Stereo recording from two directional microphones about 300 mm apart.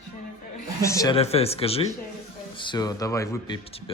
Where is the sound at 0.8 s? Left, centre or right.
Centre.